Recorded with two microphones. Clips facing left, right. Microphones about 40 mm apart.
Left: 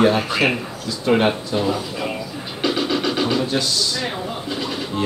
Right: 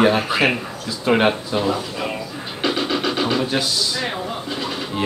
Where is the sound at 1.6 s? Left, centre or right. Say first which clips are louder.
Even; centre.